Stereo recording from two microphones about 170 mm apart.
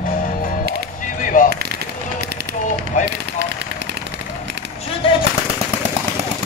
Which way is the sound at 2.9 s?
45° left (ahead or behind).